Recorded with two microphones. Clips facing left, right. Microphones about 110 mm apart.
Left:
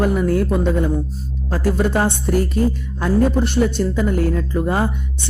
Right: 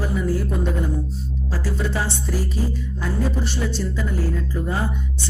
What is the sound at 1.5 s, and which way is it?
Music, 55° left (ahead or behind).